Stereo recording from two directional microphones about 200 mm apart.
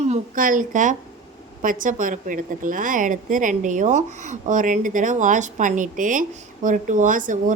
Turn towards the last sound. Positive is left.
turn(degrees=-40)  # may be behind; listen again after turning